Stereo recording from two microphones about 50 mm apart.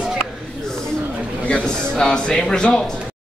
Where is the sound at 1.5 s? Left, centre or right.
Centre.